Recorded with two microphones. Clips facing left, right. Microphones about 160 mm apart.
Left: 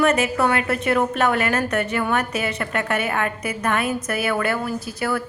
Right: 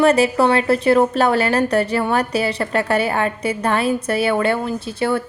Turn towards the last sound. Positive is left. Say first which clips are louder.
# right 4 dB
turn(degrees=-25)  # may be behind; listen again after turning